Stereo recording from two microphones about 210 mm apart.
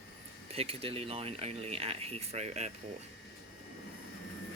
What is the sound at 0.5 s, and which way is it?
Speech, 30° right (ahead or behind).